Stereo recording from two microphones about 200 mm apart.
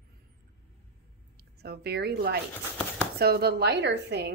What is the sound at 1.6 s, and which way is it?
A woman's voice, 55° right (ahead or behind).